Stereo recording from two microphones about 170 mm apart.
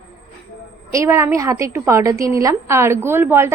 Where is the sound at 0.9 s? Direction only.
15° right (ahead or behind).